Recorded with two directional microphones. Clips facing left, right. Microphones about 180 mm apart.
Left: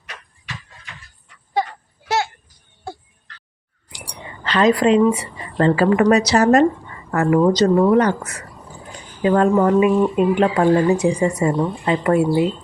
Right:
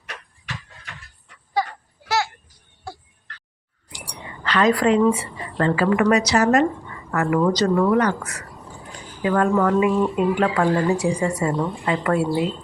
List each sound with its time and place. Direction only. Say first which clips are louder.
2.0 s a sound: left 2 dB; 20° left (ahead or behind)
4.4 s a woman's voice: left 3 dB; 25° left (ahead or behind)
5.6 s a woman's voice: left 4 dB; 35° left (ahead or behind)
7.3 s a woman's voice: left 4 dB; 20° left (ahead or behind)